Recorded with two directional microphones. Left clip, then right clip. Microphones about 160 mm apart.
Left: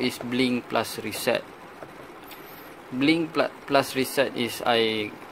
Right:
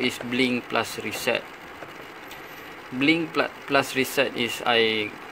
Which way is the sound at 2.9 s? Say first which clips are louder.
Right 1 dB; 15° left (ahead or behind).